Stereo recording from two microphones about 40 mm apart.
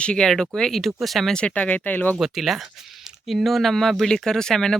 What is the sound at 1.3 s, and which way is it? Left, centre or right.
Speech, left.